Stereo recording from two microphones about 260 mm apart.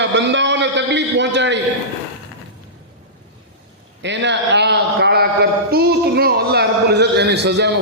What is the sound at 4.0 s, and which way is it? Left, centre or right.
A man's voice, right.